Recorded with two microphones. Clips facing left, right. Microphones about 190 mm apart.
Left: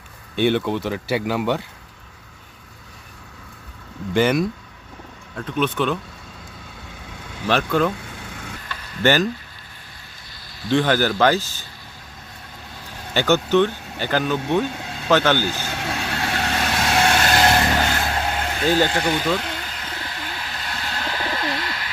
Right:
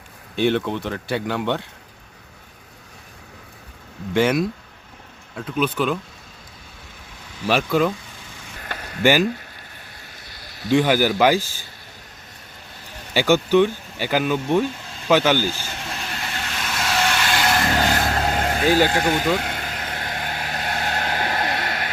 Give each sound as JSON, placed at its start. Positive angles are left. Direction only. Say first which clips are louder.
{"t": 0.3, "sound": "speech", "louder": "left 1 dB", "side_deg": 0}
{"t": 4.1, "sound": "speech", "louder": "even", "side_deg": 0}
{"t": 7.4, "sound": "speech", "louder": "even", "side_deg": -5}
{"t": 8.0, "sound": "vehicle", "louder": "left 6 dB", "side_deg": 70}
{"t": 8.6, "sound": "a sound", "louder": "right 3 dB", "side_deg": -50}
{"t": 9.0, "sound": "speech", "louder": "right 1 dB", "side_deg": -10}
{"t": 10.7, "sound": "speech", "louder": "right 1 dB", "side_deg": -10}
{"t": 13.1, "sound": "speech", "louder": "right 1 dB", "side_deg": -10}
{"t": 15.4, "sound": "vehicle", "louder": "left 1 dB", "side_deg": 65}
{"t": 17.9, "sound": "vehicle", "louder": "right 2 dB", "side_deg": -45}
{"t": 19.0, "sound": "speech", "louder": "right 1 dB", "side_deg": -45}
{"t": 19.5, "sound": "vehicle", "louder": "right 2 dB", "side_deg": -50}